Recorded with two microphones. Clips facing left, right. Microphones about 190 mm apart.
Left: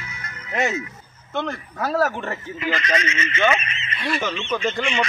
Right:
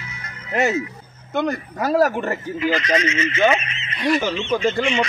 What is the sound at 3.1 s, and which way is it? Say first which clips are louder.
Speech: right 5 dB; 55° left (ahead or behind).